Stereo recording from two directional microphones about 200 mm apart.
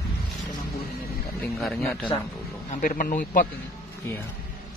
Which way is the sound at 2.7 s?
45° left (ahead or behind).